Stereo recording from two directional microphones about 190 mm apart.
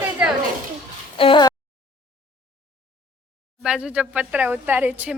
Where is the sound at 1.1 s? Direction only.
25° left (ahead or behind).